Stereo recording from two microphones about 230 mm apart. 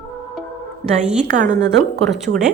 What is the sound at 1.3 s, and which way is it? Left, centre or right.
Speech, right.